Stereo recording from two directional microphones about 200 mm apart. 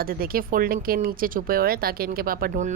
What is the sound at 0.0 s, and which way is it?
Speech, 45° right (ahead or behind).